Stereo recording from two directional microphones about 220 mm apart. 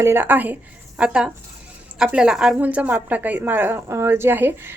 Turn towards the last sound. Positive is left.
turn(degrees=-10)  # may be behind; listen again after turning